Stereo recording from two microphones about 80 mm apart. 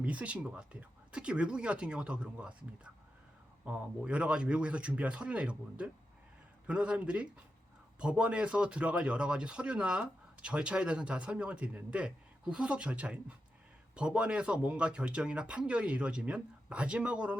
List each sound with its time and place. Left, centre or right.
0.0 s speech: centre